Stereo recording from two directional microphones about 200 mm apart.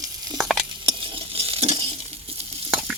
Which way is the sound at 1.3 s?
30° right (ahead or behind).